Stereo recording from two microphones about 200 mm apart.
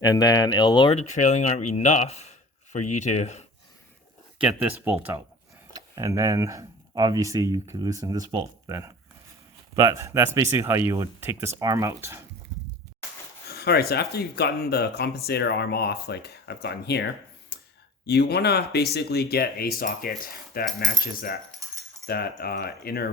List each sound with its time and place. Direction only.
0.0 s speech: 20° left (ahead or behind)
0.9 s speech: 35° left (ahead or behind)
4.4 s speech: 10° right (ahead or behind)
13.4 s speech: 50° left (ahead or behind)
17.5 s clicking: 55° left (ahead or behind)
18.0 s speech: 55° left (ahead or behind)